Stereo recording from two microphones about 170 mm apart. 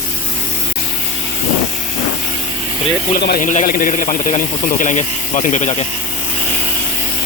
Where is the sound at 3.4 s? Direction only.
50° left (ahead or behind).